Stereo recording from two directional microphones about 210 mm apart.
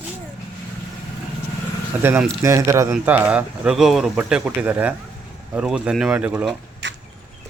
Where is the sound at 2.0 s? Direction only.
10° right (ahead or behind).